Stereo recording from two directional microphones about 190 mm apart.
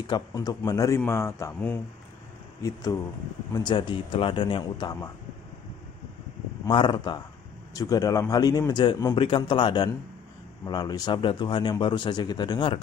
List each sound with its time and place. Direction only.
0.0 s speech: 20° left (ahead or behind)
6.6 s speech: 25° left (ahead or behind)